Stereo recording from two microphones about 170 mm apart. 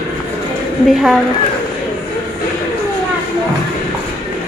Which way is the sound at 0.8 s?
Centre (ahead or behind).